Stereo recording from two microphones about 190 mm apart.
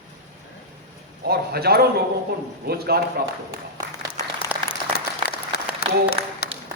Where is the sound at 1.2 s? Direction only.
55° right (ahead or behind).